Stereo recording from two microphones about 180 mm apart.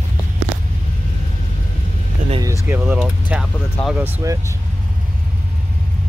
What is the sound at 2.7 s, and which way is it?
Speech, 10° right (ahead or behind).